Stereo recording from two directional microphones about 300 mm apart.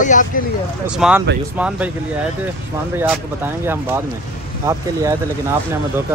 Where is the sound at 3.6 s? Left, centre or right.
Centre.